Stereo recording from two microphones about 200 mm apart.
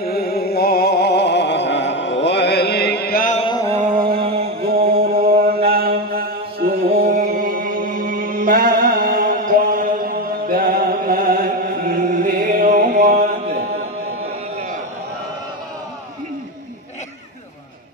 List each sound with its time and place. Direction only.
0.0 s music: 50° left (ahead or behind)
3.3 s a sound: 25° left (ahead or behind)
3.7 s a sound: 30° right (ahead or behind)
4.0 s chant: 50° right (ahead or behind)
4.6 s mantra: 50° right (ahead or behind)
7.0 s music: 50° right (ahead or behind)